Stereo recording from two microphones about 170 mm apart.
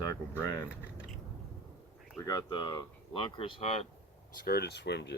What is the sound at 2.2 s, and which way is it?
Speech, 20° left (ahead or behind).